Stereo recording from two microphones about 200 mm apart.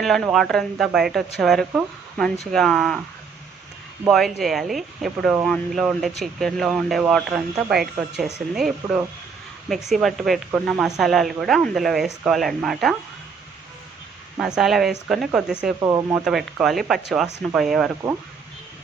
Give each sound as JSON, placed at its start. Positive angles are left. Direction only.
{"t": 0.0, "sound": "speech", "side_deg": 0}
{"t": 4.0, "sound": "speech", "side_deg": 0}
{"t": 14.3, "sound": "speech", "side_deg": -5}
{"t": 15.8, "sound": "speech", "side_deg": -15}
{"t": 16.1, "sound": "speech", "side_deg": -5}